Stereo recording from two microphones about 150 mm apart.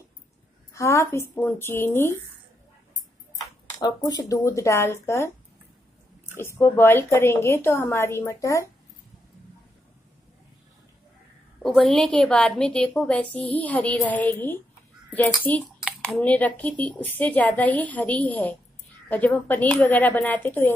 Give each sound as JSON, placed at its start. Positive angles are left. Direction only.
{"t": 0.7, "sound": "a woman's voice", "side_deg": 20}
{"t": 3.8, "sound": "speech", "side_deg": 25}
{"t": 6.3, "sound": "a woman's voice", "side_deg": 15}
{"t": 11.6, "sound": "a woman's voice", "side_deg": 0}